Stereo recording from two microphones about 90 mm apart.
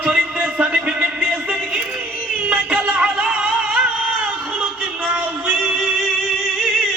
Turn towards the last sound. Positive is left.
turn(degrees=-15)  # may be behind; listen again after turning